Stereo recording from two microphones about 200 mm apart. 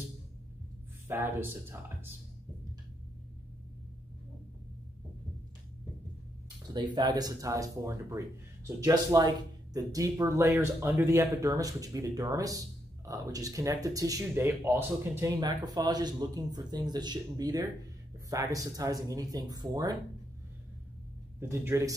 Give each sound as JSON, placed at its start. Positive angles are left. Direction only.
{"t": 1.0, "sound": "speech", "side_deg": -10}
{"t": 6.7, "sound": "speech", "side_deg": -20}
{"t": 21.4, "sound": "speech", "side_deg": -10}